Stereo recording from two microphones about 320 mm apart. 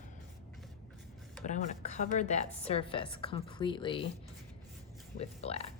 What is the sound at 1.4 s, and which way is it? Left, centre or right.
A woman's voice, left.